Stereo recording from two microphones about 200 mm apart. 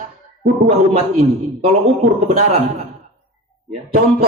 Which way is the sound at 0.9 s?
30° right (ahead or behind).